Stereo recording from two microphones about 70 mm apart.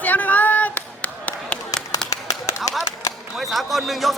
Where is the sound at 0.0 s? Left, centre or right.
Left.